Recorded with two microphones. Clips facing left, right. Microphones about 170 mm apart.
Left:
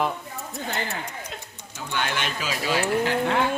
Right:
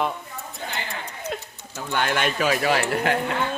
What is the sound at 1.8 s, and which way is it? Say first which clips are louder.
Speech: right 4 dB; 50° right (ahead or behind).